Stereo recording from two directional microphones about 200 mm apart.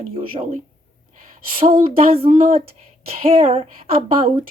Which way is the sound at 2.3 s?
45° right (ahead or behind).